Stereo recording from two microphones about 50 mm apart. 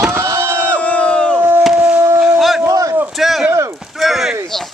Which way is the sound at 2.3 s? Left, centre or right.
Centre.